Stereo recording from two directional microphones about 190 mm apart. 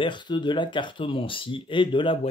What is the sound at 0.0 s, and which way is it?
Mantra, 25° left (ahead or behind).